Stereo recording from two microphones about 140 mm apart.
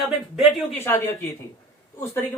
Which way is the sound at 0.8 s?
15° left (ahead or behind).